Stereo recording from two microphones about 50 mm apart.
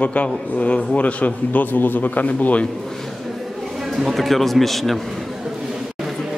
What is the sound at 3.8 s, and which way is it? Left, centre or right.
Speech, centre.